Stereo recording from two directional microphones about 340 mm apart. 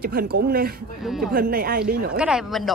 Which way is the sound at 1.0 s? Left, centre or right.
Centre.